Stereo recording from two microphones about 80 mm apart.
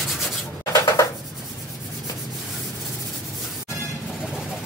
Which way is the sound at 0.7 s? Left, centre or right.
Left.